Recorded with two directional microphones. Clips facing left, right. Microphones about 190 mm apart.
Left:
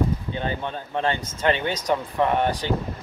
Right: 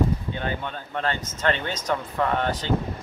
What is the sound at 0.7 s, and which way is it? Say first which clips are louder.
Speech: left 3 dB; 15° left (ahead or behind).